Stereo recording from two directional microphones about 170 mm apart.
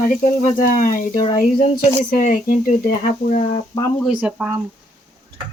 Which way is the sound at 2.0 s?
50° left (ahead or behind).